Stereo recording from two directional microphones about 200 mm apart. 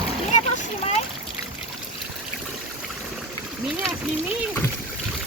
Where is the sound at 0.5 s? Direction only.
30° left (ahead or behind).